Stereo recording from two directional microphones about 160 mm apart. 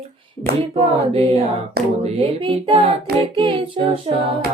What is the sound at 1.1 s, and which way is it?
Female singing, 40° right (ahead or behind).